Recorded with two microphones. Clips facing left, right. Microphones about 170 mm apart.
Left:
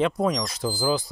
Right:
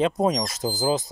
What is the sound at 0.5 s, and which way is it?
Speech, 40° right (ahead or behind).